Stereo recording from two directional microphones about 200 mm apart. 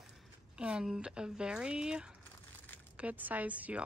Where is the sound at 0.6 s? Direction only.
5° right (ahead or behind).